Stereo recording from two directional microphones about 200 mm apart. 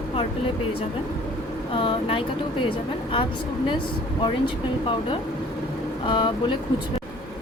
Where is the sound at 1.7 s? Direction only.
25° left (ahead or behind).